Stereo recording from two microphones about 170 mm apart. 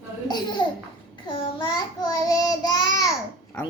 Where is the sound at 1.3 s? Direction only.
25° left (ahead or behind).